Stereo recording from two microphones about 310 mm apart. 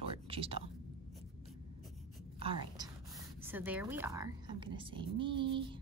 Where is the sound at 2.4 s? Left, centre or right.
Centre.